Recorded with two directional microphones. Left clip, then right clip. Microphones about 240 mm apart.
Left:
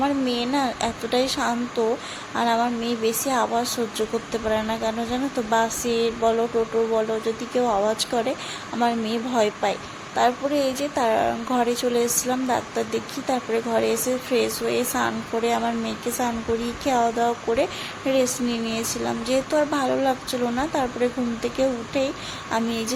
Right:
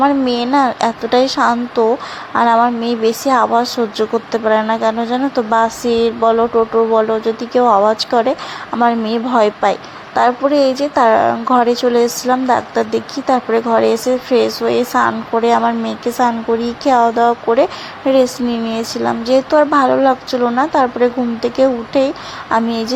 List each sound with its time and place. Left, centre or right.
0.0 s a woman's voice: centre